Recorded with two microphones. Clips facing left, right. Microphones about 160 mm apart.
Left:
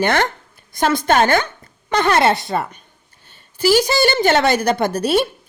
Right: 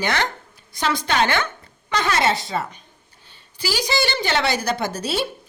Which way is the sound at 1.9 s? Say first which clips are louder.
Left 5 dB; 55° left (ahead or behind).